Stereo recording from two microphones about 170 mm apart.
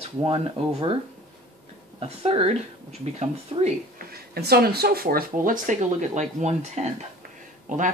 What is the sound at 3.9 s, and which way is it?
Speech, 65° right (ahead or behind).